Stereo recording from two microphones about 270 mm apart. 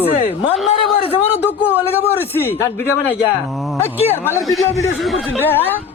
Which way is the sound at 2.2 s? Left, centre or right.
Centre.